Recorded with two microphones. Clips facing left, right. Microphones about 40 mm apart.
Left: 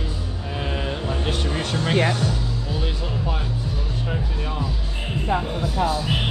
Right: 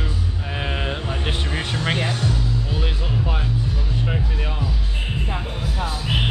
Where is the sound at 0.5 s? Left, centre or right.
Right.